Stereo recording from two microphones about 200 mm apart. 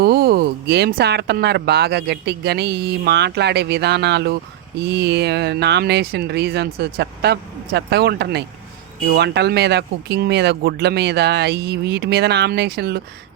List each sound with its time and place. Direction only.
0.0 s speech: 50° right (ahead or behind)